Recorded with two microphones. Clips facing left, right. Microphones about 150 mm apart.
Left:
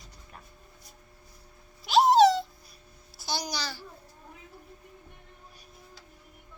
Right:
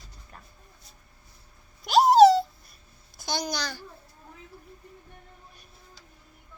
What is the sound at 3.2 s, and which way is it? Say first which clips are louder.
Speech: right 3 dB; 5° left (ahead or behind).